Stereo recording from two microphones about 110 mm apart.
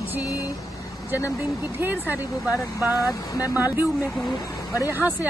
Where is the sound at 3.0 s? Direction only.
30° left (ahead or behind).